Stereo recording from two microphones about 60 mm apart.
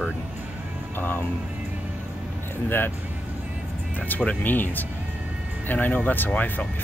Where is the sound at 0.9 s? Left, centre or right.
Left.